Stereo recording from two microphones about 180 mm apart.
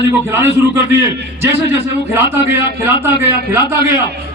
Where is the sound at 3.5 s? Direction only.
15° right (ahead or behind).